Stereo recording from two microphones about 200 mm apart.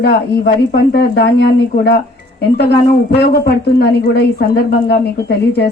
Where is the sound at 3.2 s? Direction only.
55° left (ahead or behind).